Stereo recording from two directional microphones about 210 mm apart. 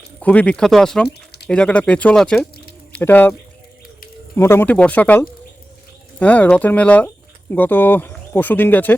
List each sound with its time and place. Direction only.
0.2 s speech: 5° left (ahead or behind)
1.0 s a sound: 50° left (ahead or behind)
1.5 s speech: 5° left (ahead or behind)
4.4 s speech: 10° left (ahead or behind)